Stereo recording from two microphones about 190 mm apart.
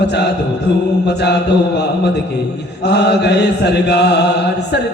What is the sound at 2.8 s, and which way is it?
Mantra, 60° left (ahead or behind).